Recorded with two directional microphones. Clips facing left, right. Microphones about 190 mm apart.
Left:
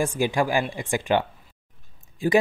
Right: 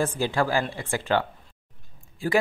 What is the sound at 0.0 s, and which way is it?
Speech, 15° left (ahead or behind).